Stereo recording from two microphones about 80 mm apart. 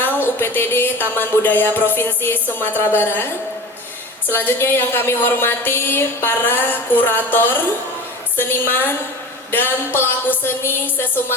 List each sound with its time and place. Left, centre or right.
0.0 s a woman's voice: left